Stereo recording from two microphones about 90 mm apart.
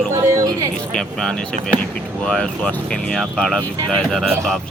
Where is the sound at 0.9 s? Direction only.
10° left (ahead or behind).